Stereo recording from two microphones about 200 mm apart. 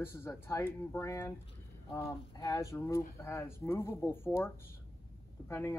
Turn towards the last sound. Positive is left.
turn(degrees=10)  # may be behind; listen again after turning